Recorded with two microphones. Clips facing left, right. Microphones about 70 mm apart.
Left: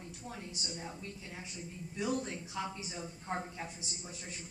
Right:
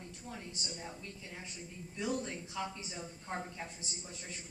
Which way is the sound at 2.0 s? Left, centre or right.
Centre.